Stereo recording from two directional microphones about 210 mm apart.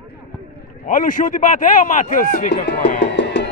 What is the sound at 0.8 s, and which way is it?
Speech, 40° left (ahead or behind).